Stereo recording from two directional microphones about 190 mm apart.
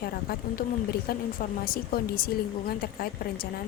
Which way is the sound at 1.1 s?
55° left (ahead or behind).